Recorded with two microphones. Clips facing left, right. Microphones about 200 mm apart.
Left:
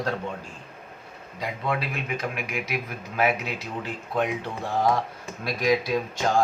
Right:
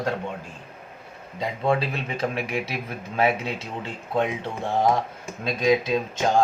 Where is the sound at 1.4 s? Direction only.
25° right (ahead or behind).